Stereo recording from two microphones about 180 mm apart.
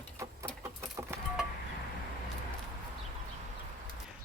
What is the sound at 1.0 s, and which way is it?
Vehicle, 15° right (ahead or behind).